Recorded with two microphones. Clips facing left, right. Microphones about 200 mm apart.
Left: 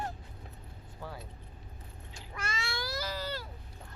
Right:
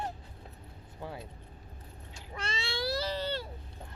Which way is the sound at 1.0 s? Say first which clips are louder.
Right 2 dB; 25° right (ahead or behind).